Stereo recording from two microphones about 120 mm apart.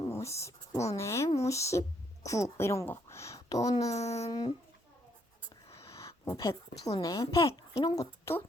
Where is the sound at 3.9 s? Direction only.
65° left (ahead or behind).